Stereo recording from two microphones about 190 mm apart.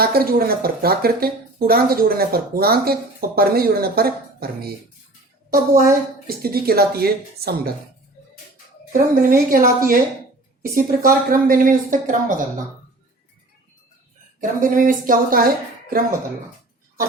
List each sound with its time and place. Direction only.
0.0 s speech: 50° right (ahead or behind)
8.9 s speech: 50° right (ahead or behind)
14.6 s speech: 45° right (ahead or behind)